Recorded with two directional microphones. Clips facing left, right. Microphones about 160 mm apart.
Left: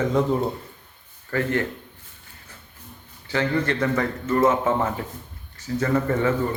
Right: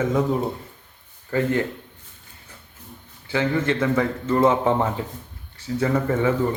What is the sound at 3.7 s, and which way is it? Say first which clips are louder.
Speech: right 2 dB; 10° right (ahead or behind).